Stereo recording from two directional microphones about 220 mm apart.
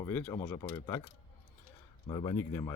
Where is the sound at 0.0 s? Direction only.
10° left (ahead or behind).